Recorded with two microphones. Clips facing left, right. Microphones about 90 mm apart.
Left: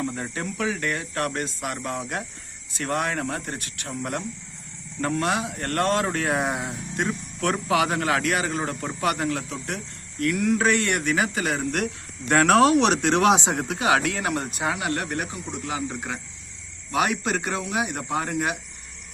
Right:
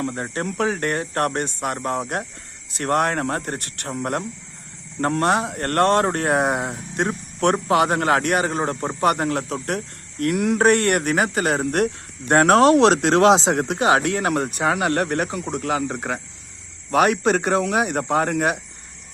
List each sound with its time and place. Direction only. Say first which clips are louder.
0.0 s speech: right 4 dB; 50° right (ahead or behind)
12.9 s speech: right 4 dB; 90° right
13.1 s speech: right 5 dB; 30° right (ahead or behind); by 18.5 s 55° right (ahead or behind)